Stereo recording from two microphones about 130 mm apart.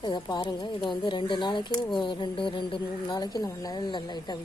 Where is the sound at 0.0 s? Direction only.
35° left (ahead or behind).